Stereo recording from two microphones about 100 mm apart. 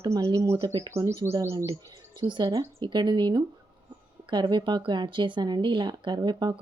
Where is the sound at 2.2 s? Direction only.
45° right (ahead or behind).